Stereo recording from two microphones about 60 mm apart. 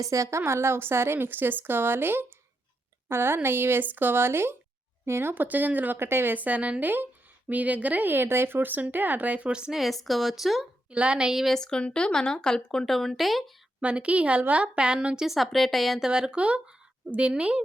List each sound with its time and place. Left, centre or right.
0.0 s speech: right
9.5 s a woman's voice: centre
9.7 s speech: centre
10.9 s a woman's voice: centre
11.4 s speech: centre
13.8 s a woman's voice: right; by 16.0 s centre
16.0 s a woman's voice: centre